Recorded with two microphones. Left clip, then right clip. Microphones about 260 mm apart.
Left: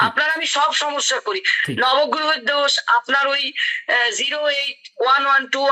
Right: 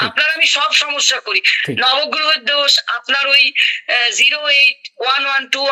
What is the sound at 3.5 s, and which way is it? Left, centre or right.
Speech, right.